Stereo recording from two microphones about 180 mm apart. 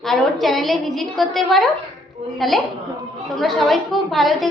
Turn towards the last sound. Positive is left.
turn(degrees=0)  # may be behind; listen again after turning